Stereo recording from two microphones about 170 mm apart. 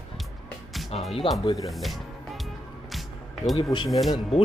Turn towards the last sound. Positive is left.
turn(degrees=0)  # may be behind; listen again after turning